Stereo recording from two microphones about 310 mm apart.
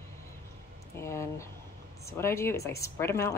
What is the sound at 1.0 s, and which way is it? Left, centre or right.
Speech, centre.